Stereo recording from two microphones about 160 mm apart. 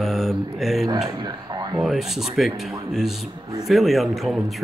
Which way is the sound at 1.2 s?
25° right (ahead or behind).